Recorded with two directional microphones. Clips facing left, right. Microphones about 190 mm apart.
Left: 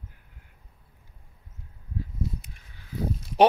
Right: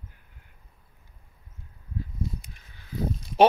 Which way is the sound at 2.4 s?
5° left (ahead or behind).